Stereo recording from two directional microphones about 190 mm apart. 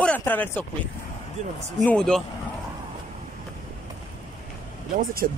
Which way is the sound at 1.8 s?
5° left (ahead or behind).